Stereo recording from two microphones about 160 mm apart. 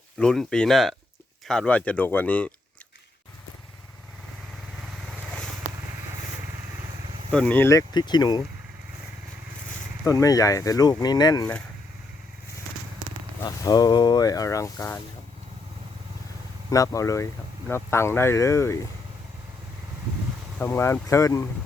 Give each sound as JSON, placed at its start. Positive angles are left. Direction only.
{"t": 0.2, "sound": "speech", "side_deg": 5}
{"t": 4.8, "sound": "vehicle", "side_deg": 0}
{"t": 7.3, "sound": "speech", "side_deg": 5}
{"t": 10.1, "sound": "speech", "side_deg": 20}
{"t": 13.4, "sound": "speech", "side_deg": 25}
{"t": 16.6, "sound": "speech", "side_deg": 20}
{"t": 20.6, "sound": "speech", "side_deg": 15}